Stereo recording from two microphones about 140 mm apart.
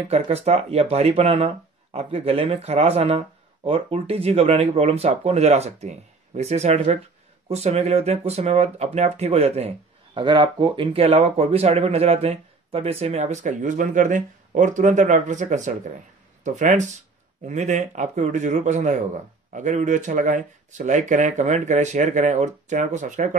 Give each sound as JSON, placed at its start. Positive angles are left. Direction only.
{"t": 0.1, "sound": "speech", "side_deg": -45}
{"t": 10.1, "sound": "speech", "side_deg": -35}